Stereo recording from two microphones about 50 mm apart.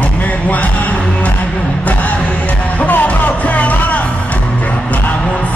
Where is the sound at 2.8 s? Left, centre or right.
Left.